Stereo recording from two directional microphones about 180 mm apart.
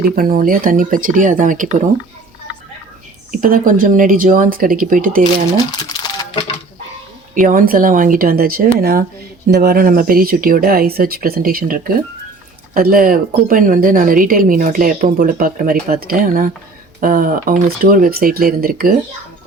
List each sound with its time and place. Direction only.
0.0 s a woman's voice: 55° right (ahead or behind)
3.3 s a woman's voice: 50° right (ahead or behind)
7.3 s a woman's voice: 50° right (ahead or behind)